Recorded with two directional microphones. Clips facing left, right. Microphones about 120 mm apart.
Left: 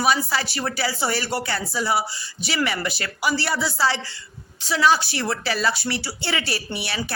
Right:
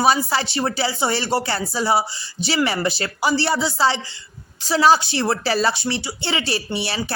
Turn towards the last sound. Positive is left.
turn(degrees=-30)  # may be behind; listen again after turning